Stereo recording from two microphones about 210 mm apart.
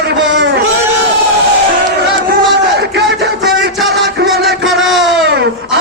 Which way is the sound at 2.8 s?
55° right (ahead or behind).